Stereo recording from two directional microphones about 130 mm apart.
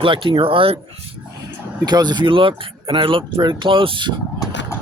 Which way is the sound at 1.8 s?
35° right (ahead or behind).